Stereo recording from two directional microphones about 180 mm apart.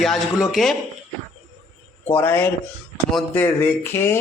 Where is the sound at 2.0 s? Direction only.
15° left (ahead or behind).